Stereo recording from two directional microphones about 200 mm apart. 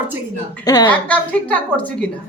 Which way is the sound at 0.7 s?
20° left (ahead or behind).